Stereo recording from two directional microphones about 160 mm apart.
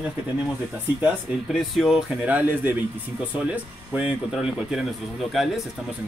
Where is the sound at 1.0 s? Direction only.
5° right (ahead or behind).